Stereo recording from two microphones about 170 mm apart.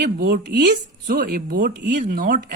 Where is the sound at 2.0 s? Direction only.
60° right (ahead or behind).